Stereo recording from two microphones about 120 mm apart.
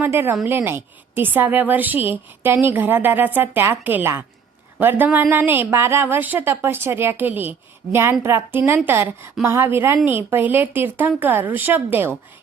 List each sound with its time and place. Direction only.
0.0 s a woman's voice: 20° right (ahead or behind)